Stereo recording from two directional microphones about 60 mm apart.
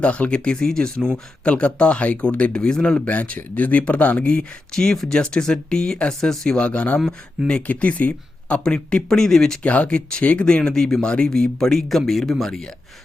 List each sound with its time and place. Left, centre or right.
0.0 s speech: left
6.6 s speech: centre
9.6 s speech: left